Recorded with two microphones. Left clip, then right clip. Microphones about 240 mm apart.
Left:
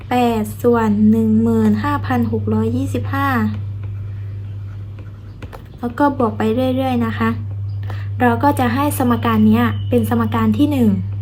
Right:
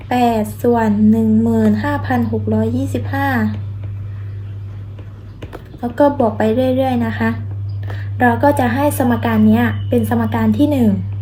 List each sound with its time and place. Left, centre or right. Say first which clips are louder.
0.1 s speech: right 2 dB; centre
5.8 s speech: right 3 dB; centre
9.0 s a woman's voice: even; centre
9.6 s speech: right 1 dB; centre